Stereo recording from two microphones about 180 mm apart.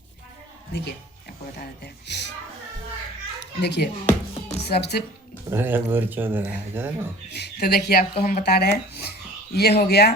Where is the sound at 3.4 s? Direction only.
70° left (ahead or behind).